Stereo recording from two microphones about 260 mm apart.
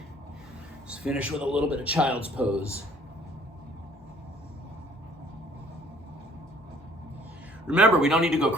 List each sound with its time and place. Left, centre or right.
0.9 s a man's voice: centre
7.7 s a man's voice: centre